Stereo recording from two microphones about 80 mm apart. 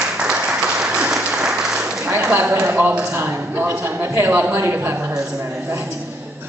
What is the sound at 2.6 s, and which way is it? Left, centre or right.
A man's voice, right.